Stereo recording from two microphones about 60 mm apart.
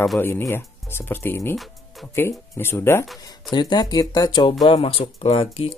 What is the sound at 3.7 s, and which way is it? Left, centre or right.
Speech, left.